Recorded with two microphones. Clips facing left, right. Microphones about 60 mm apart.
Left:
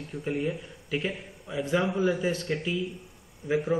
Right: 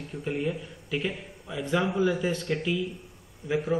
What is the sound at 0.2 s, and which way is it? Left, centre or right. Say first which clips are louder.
A man's voice: even; centre.